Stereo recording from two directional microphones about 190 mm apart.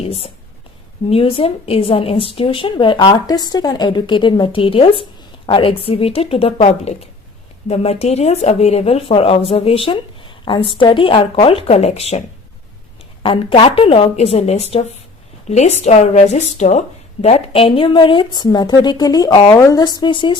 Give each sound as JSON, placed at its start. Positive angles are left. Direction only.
{"t": 0.0, "sound": "a woman's voice", "side_deg": 30}
{"t": 13.2, "sound": "a woman's voice", "side_deg": 30}